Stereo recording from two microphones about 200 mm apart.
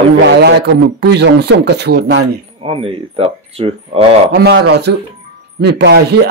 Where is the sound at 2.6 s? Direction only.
30° right (ahead or behind).